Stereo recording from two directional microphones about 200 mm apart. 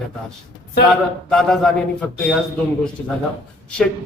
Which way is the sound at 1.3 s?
5° left (ahead or behind).